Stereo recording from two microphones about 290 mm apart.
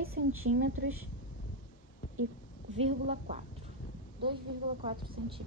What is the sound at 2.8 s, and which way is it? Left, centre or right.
Speech, right.